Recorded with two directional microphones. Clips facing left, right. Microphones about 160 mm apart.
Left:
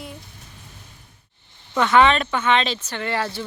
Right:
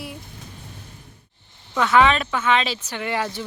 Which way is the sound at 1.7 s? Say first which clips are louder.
Left 1 dB; centre (ahead or behind).